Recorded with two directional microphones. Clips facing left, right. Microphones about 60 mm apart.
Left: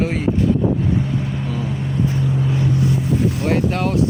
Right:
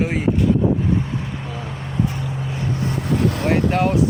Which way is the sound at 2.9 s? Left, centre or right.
Right.